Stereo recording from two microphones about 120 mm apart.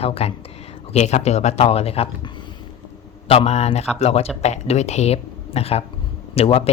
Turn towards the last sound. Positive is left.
turn(degrees=55)  # may be behind; listen again after turning